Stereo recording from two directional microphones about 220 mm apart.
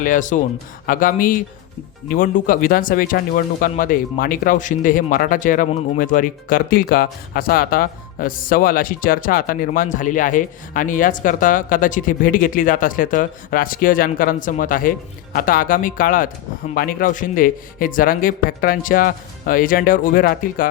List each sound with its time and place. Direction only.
0.0 s speech: 35° left (ahead or behind)